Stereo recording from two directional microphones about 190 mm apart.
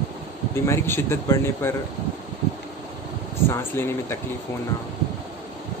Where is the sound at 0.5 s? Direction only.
15° left (ahead or behind).